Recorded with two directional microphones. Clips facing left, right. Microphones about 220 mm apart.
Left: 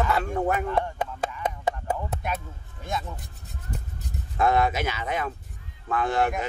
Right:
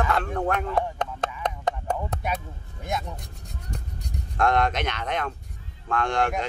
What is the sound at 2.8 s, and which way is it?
Speech, 15° right (ahead or behind).